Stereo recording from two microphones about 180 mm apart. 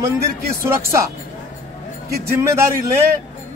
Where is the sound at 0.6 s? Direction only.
15° right (ahead or behind).